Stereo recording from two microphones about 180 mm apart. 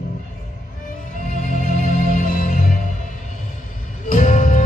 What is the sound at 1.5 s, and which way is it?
Music, 45° left (ahead or behind).